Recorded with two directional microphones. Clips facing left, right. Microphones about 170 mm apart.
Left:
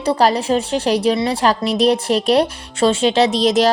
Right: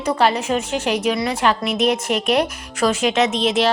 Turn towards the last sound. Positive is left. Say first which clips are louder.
# left 4 dB
turn(degrees=40)  # may be behind; listen again after turning